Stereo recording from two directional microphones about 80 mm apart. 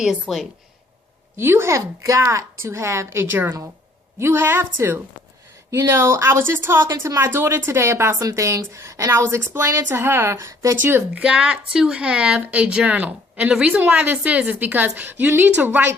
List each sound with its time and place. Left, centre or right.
0.0 s a woman's voice: centre
1.4 s a woman's voice: right
10.8 s a woman's voice: right
11.2 s speech: centre
13.5 s speech: centre
13.7 s a woman's voice: centre